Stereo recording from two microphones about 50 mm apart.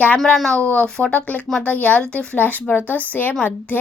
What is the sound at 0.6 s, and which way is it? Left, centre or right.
Speech, left.